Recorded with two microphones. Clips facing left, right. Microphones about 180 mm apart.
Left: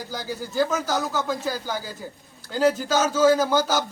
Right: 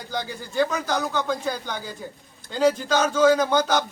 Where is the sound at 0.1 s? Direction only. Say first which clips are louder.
Right 2 dB; 5° left (ahead or behind).